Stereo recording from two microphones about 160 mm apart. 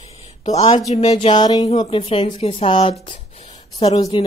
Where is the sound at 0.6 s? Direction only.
45° left (ahead or behind).